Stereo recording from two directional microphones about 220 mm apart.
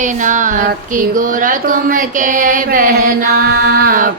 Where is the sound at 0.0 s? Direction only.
35° right (ahead or behind).